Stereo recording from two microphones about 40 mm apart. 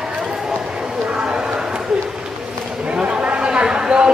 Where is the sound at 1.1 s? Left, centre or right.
Right.